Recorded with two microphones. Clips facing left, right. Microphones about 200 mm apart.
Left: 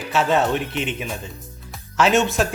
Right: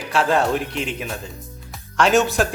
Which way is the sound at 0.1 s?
Centre (ahead or behind).